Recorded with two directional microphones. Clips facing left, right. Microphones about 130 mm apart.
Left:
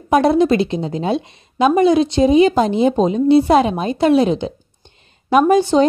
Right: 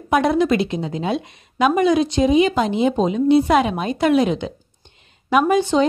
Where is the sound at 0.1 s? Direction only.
35° left (ahead or behind).